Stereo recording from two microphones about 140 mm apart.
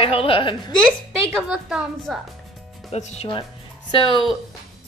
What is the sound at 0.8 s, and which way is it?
Speech, 5° left (ahead or behind).